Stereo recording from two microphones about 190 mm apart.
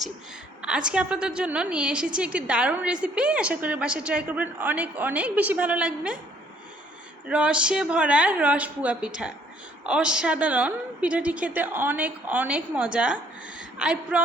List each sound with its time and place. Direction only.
0.6 s a woman's voice: 5° right (ahead or behind)
7.3 s a woman's voice: 5° right (ahead or behind)